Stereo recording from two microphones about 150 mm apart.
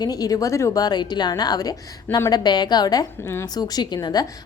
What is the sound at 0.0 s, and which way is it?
A woman's voice, 25° left (ahead or behind).